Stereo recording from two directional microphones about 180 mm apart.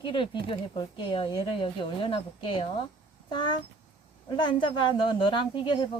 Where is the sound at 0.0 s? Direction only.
25° left (ahead or behind).